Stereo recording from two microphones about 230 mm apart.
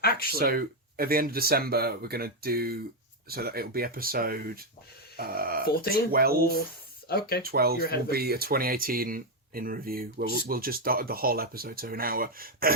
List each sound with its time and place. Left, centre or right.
0.0 s a sound: left
0.3 s speech: right
5.6 s speech: left
6.1 s speech: right
7.1 s speech: left
7.4 s speech: right